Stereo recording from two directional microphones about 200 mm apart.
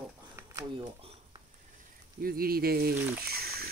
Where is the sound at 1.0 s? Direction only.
30° right (ahead or behind).